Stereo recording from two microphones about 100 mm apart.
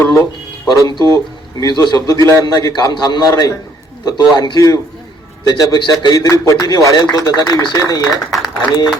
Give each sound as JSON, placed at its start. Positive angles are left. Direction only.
{"t": 0.0, "sound": "speech", "side_deg": 30}
{"t": 0.9, "sound": "speech", "side_deg": -45}
{"t": 1.5, "sound": "a man's voice", "side_deg": 45}
{"t": 6.1, "sound": "a man's voice", "side_deg": 35}
{"t": 8.1, "sound": "a man's voice", "side_deg": 0}